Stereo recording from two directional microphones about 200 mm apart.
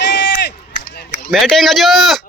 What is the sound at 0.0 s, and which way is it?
Run, 60° left (ahead or behind).